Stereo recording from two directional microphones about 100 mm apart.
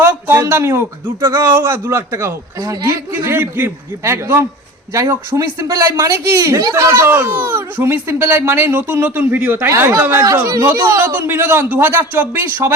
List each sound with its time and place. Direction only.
0.3 s speech: 25° right (ahead or behind)
3.2 s speech: 20° right (ahead or behind)
10.4 s speech: 35° right (ahead or behind)
10.8 s speech: 20° right (ahead or behind)